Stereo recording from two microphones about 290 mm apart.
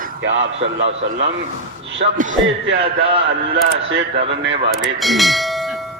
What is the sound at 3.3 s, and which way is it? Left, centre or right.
A man's voice, right.